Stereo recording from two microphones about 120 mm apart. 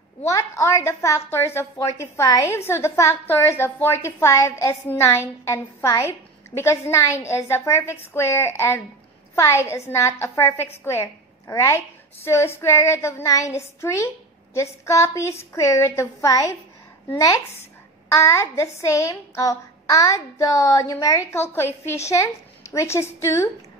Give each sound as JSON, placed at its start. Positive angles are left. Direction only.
{"t": 0.3, "sound": "a woman's voice", "side_deg": 25}